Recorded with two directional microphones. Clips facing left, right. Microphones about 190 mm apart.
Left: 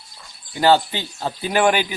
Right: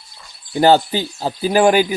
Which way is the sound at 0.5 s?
40° right (ahead or behind).